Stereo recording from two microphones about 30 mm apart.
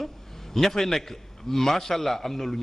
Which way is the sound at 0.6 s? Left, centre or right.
Centre.